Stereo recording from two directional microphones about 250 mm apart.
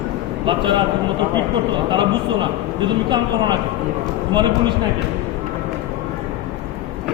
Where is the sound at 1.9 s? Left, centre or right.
Centre.